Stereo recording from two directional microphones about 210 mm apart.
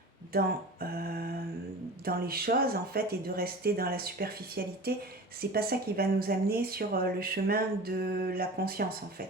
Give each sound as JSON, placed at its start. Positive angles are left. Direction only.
{"t": 0.3, "sound": "speech", "side_deg": -45}